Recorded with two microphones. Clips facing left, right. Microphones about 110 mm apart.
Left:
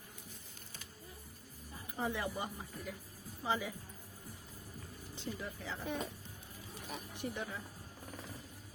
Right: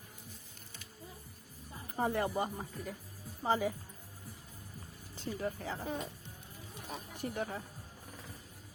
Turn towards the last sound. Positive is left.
turn(degrees=-40)  # may be behind; listen again after turning